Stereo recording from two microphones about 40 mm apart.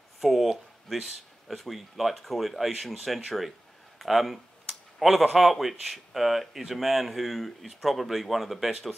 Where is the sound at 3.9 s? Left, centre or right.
Centre.